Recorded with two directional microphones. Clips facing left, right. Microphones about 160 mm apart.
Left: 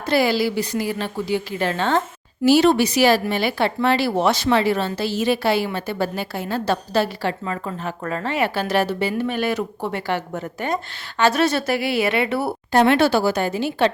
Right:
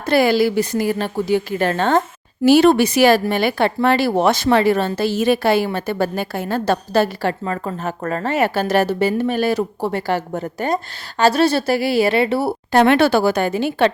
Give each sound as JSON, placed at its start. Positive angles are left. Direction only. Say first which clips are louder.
{"t": 0.0, "sound": "a woman's voice", "louder": "right 4 dB", "side_deg": -50}
{"t": 12.7, "sound": "speech", "louder": "right 2 dB", "side_deg": -60}